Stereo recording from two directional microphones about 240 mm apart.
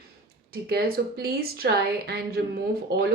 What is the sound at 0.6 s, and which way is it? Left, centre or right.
Speech, right.